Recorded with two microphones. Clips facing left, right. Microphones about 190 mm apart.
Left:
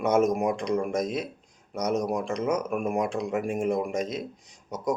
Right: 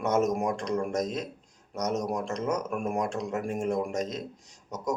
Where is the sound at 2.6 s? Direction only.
15° left (ahead or behind).